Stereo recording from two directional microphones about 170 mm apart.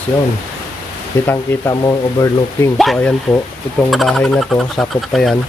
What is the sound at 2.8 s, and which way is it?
Speech, 5° left (ahead or behind).